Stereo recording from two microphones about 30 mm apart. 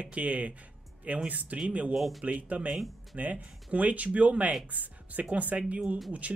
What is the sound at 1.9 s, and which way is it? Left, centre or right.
Speech, centre.